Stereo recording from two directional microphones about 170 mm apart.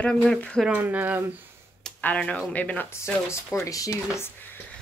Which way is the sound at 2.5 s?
10° left (ahead or behind).